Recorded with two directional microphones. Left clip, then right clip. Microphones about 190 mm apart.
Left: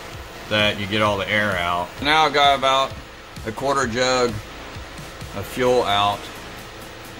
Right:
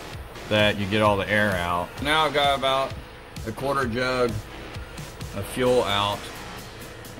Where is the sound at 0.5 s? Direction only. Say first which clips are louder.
Left 2 dB; 35° right (ahead or behind).